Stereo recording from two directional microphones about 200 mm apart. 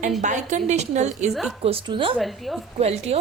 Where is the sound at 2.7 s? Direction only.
30° right (ahead or behind).